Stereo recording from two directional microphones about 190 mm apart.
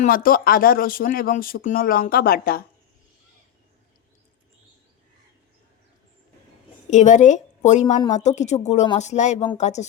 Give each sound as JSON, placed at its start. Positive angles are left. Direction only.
{"t": 0.0, "sound": "speech", "side_deg": 50}
{"t": 6.9, "sound": "a woman's voice", "side_deg": 40}